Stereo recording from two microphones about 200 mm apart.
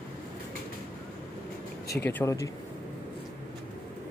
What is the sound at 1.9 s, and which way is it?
Speech, 10° left (ahead or behind).